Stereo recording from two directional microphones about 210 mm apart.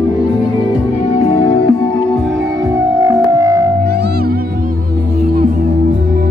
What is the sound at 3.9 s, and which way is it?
Music, 50° right (ahead or behind).